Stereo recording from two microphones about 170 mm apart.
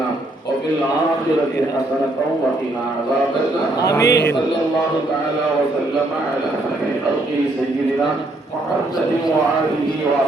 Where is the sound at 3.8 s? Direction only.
20° left (ahead or behind).